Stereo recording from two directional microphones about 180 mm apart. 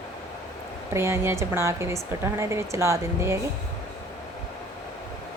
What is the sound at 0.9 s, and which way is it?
A woman's voice, 15° right (ahead or behind).